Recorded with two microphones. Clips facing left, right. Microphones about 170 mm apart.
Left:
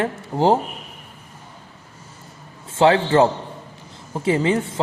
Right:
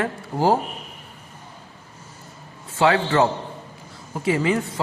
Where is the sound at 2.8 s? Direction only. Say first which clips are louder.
Left 3 dB; 25° left (ahead or behind).